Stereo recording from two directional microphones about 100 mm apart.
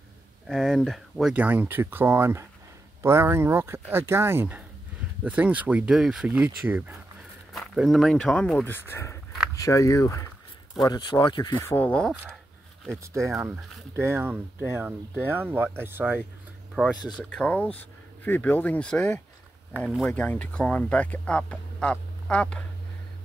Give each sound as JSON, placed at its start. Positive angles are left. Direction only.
{"t": 0.5, "sound": "speech", "side_deg": -5}
{"t": 1.3, "sound": "speech", "side_deg": -15}
{"t": 5.9, "sound": "speech", "side_deg": -5}
{"t": 7.7, "sound": "speech", "side_deg": 0}
{"t": 8.6, "sound": "speech", "side_deg": 25}
{"t": 10.8, "sound": "speech", "side_deg": 45}
{"t": 11.7, "sound": "speech", "side_deg": 15}
{"t": 13.0, "sound": "speech", "side_deg": -30}
{"t": 16.8, "sound": "speech", "side_deg": -10}
{"t": 17.2, "sound": "speech", "side_deg": 10}